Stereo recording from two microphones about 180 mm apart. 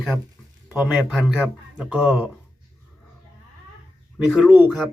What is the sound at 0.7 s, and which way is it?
Speech, 5° right (ahead or behind).